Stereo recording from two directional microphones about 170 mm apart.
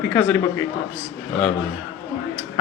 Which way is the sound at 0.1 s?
10° left (ahead or behind).